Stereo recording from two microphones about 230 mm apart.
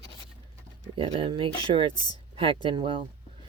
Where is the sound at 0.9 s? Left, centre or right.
Right.